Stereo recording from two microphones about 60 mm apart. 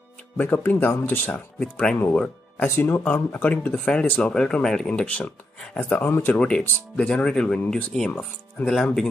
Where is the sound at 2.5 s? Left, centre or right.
Left.